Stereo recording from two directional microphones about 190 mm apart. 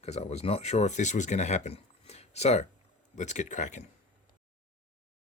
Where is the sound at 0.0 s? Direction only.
35° left (ahead or behind).